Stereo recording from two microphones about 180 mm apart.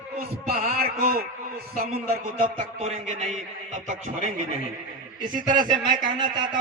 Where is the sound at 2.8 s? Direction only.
35° right (ahead or behind).